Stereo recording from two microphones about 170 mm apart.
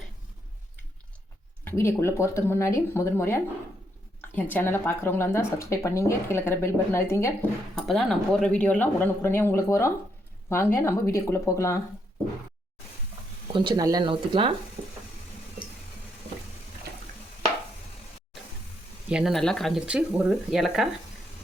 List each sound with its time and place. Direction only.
1.6 s speech: 15° left (ahead or behind)
7.9 s speech: centre (ahead or behind); by 11.8 s 15° left (ahead or behind)
13.5 s speech: 30° right (ahead or behind)
19.0 s speech: 5° right (ahead or behind)